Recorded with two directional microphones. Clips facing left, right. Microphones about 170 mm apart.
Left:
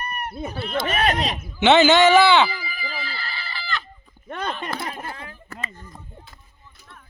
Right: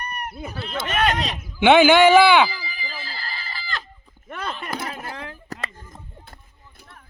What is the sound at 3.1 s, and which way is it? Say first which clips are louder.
Chicken: left 1 dB; 45° right (ahead or behind).